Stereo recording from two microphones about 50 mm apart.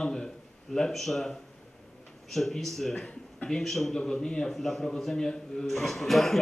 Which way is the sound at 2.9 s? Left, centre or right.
Centre.